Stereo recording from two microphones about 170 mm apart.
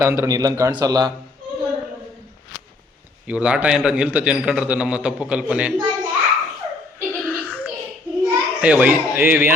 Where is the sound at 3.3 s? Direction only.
5° right (ahead or behind).